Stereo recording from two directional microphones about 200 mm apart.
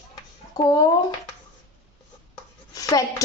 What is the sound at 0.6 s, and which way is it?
Speech, 20° left (ahead or behind).